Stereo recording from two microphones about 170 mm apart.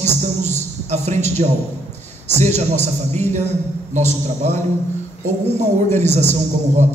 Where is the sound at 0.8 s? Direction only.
40° right (ahead or behind).